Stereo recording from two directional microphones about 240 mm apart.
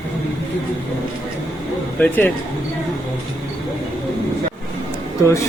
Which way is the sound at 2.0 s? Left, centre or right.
Centre.